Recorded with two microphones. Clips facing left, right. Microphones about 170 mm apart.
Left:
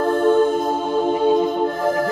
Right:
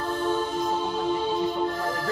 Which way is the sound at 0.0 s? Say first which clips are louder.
Left 11 dB; 50° left (ahead or behind).